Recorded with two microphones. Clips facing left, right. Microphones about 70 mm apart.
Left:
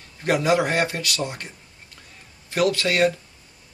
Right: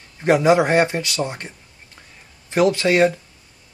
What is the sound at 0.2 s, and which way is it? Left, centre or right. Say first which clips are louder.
Speech: right 5 dB; right.